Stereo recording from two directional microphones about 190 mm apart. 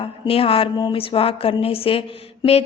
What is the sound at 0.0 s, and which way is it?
A woman's voice, 30° left (ahead or behind).